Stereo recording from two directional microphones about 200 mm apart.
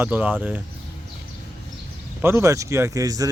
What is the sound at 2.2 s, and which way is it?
Speech, 15° right (ahead or behind).